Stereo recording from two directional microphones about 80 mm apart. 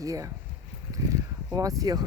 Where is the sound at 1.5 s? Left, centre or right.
Right.